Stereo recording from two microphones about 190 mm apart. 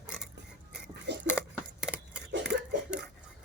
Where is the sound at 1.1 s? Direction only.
65° right (ahead or behind).